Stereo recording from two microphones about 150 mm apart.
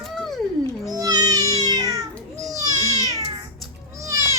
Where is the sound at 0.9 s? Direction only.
25° right (ahead or behind).